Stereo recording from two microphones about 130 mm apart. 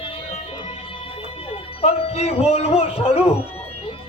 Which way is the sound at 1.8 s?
55° left (ahead or behind).